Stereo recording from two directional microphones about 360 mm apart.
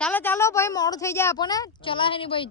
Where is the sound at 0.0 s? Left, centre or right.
Centre.